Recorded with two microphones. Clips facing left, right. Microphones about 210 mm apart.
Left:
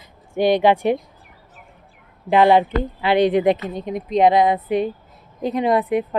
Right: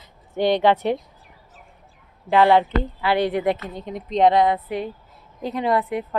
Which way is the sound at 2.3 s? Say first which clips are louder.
Left 2 dB; 15° left (ahead or behind).